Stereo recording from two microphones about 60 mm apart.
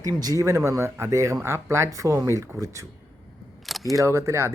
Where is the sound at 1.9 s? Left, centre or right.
Right.